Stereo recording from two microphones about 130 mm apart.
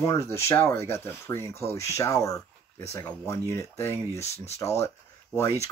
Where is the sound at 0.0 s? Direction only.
25° left (ahead or behind).